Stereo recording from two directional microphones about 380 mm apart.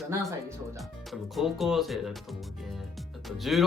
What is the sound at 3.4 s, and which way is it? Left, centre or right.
Speech, centre.